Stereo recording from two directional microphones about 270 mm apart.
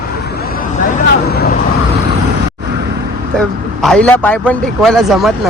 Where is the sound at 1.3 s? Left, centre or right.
Left.